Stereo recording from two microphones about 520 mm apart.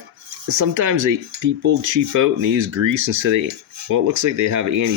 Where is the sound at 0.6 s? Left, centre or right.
Right.